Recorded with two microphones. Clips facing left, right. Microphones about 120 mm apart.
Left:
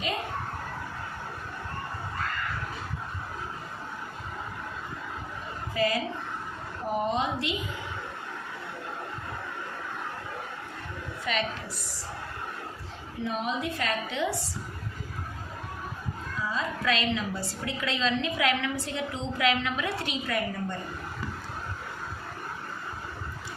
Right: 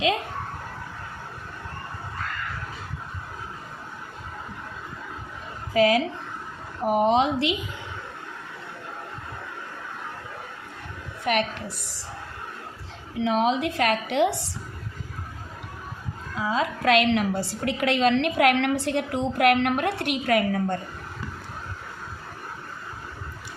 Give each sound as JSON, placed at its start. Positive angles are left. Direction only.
{"t": 5.7, "sound": "speech", "side_deg": -70}
{"t": 6.8, "sound": "a woman's voice", "side_deg": -90}
{"t": 11.3, "sound": "a woman's voice", "side_deg": -60}
{"t": 13.1, "sound": "a woman's voice", "side_deg": -90}
{"t": 16.3, "sound": "a woman's voice", "side_deg": -85}